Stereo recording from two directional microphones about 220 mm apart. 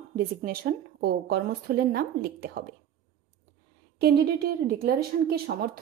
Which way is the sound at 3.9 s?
45° right (ahead or behind).